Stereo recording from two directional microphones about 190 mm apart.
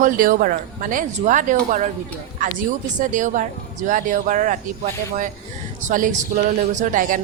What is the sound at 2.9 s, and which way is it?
A woman's voice, 40° right (ahead or behind).